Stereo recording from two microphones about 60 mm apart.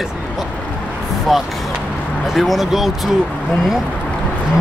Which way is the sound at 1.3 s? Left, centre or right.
Centre.